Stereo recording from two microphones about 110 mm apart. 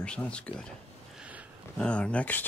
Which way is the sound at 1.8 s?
10° left (ahead or behind).